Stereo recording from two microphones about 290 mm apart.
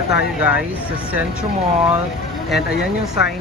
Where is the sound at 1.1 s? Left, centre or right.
Centre.